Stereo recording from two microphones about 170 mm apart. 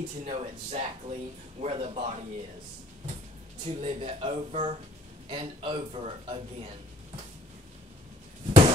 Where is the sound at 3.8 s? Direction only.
35° right (ahead or behind).